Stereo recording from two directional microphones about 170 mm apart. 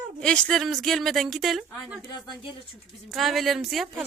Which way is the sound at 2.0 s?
25° left (ahead or behind).